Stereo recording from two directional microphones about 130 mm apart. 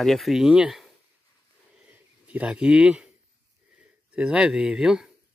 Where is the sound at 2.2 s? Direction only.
10° right (ahead or behind).